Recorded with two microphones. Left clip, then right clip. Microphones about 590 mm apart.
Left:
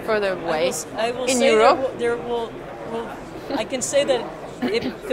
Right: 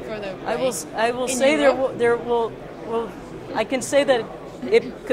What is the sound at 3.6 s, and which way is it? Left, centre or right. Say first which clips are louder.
Speech: right 2 dB; right.